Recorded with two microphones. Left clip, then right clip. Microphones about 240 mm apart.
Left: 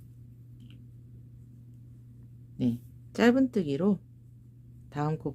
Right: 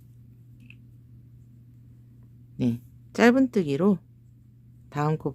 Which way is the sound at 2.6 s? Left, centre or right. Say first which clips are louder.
Right 3 dB; centre.